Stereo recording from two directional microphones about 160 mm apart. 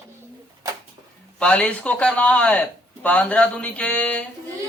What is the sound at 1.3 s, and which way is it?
Speech, 5° left (ahead or behind).